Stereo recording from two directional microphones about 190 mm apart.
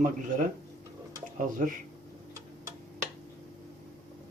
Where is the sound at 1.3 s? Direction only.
45° right (ahead or behind).